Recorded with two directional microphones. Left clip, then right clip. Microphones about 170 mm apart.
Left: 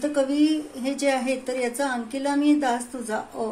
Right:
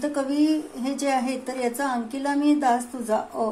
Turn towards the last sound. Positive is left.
turn(degrees=-10)  # may be behind; listen again after turning